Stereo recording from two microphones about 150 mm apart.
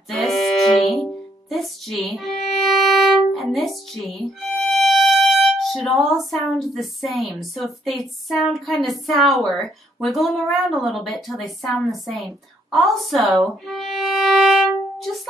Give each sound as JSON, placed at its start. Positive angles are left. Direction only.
{"t": 0.1, "sound": "music", "side_deg": 0}
{"t": 5.9, "sound": "a woman's voice", "side_deg": 0}
{"t": 12.7, "sound": "violin", "side_deg": 0}